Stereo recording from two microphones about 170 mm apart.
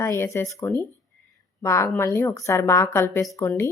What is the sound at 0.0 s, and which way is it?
Speech, 15° left (ahead or behind).